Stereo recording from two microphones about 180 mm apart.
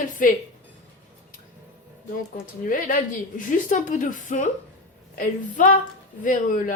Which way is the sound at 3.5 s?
45° left (ahead or behind).